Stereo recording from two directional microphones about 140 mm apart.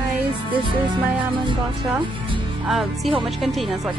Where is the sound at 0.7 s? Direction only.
35° right (ahead or behind).